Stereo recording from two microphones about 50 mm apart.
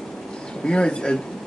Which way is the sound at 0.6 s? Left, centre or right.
Centre.